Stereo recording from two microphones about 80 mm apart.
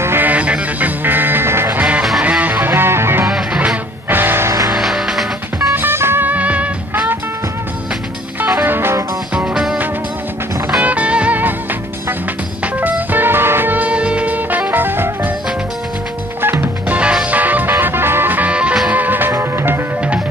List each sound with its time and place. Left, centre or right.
0.0 s music: right
0.3 s music: centre
3.3 s music: centre
4.1 s music: right
4.7 s music: centre
5.7 s music: right
8.6 s music: right
9.5 s music: centre
10.8 s music: centre
12.8 s music: right
16.3 s music: right
16.9 s music: centre; by 19.8 s right